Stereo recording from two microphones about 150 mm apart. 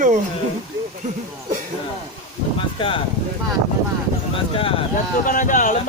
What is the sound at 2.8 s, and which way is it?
Speech, 35° left (ahead or behind).